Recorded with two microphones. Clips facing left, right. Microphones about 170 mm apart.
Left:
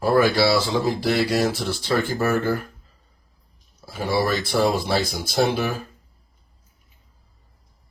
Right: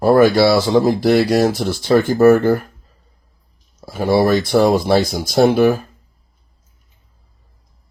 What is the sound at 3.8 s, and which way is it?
Speech, 45° right (ahead or behind).